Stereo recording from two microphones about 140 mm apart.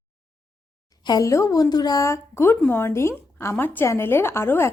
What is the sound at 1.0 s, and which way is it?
A woman's voice, 25° left (ahead or behind).